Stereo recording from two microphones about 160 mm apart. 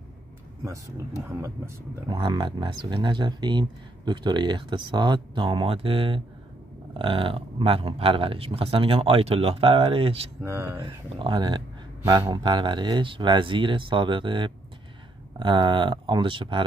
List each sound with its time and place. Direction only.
1.3 s speech: 20° right (ahead or behind); by 10.3 s 35° right (ahead or behind)
10.4 s speech: 15° right (ahead or behind)
10.8 s speech: 30° right (ahead or behind)